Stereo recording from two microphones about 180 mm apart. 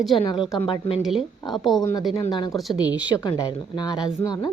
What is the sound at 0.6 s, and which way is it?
Speech, 30° left (ahead or behind).